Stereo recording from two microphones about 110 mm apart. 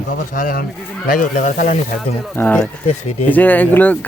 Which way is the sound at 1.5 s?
90° left.